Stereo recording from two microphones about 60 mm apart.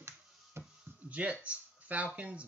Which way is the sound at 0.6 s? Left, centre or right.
Right.